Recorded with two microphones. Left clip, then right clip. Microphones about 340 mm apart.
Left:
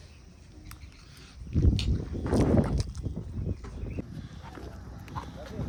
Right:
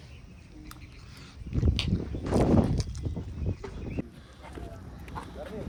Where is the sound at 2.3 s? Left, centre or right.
Centre.